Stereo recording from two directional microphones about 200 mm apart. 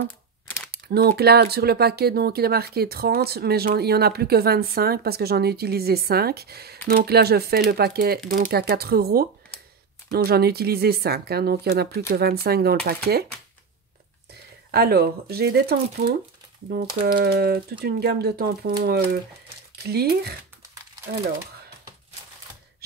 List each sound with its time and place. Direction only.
0.7 s speech: 50° right (ahead or behind)
14.7 s speech: 50° right (ahead or behind)